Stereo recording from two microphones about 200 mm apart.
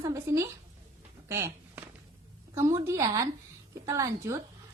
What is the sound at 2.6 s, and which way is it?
A woman's voice, 15° right (ahead or behind).